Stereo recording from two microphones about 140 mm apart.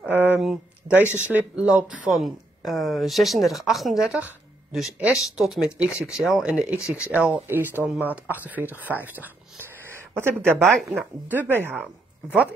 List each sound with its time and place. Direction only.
0.0 s a sound: 10° right (ahead or behind)
0.4 s a sound: centre (ahead or behind)
1.0 s speech: 15° left (ahead or behind)
1.3 s speech: 5° right (ahead or behind)
10.6 s speech: centre (ahead or behind)
11.2 s speech: 15° right (ahead or behind)